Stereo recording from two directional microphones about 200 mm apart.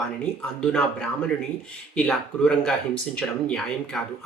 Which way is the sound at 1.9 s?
5° left (ahead or behind).